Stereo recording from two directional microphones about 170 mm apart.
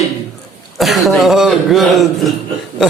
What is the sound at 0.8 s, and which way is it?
A man's voice, centre (ahead or behind).